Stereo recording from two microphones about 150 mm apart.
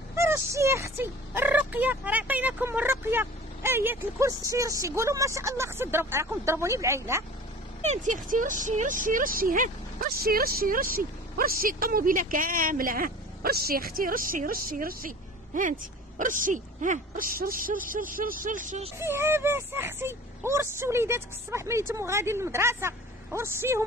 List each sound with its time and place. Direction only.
0.1 s speech: 20° right (ahead or behind)
7.8 s speech: 50° right (ahead or behind)
18.9 s speech: 15° right (ahead or behind)